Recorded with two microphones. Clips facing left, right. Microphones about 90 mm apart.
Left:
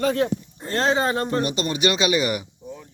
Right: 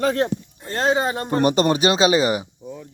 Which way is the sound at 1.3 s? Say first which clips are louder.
Right 6 dB; 50° right (ahead or behind).